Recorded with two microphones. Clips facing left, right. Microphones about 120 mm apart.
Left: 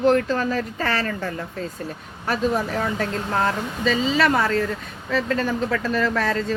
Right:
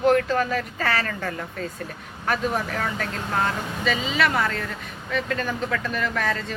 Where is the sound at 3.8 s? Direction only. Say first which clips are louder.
Left 4 dB; 35° left (ahead or behind).